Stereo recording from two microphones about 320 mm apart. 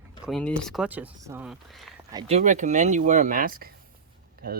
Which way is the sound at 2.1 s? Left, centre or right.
Centre.